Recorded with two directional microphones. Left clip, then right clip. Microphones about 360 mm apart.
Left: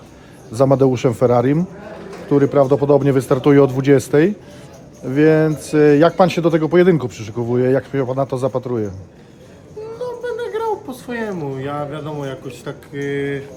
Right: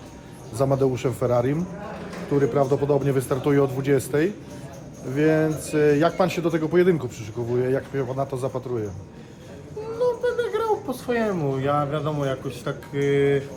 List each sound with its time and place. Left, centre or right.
0.5 s speech: left
10.0 s speech: centre